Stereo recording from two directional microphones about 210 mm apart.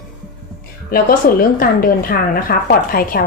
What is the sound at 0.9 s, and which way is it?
Speech, 45° left (ahead or behind).